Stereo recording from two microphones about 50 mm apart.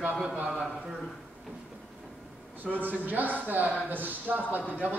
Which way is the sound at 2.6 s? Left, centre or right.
Right.